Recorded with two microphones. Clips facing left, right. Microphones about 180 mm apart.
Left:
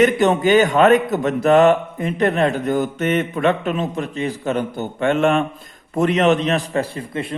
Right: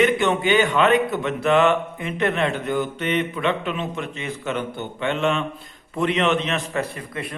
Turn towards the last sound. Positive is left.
turn(degrees=25)  # may be behind; listen again after turning